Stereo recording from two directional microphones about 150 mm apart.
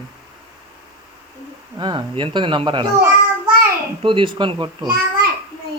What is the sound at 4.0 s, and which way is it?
Speech, 35° right (ahead or behind).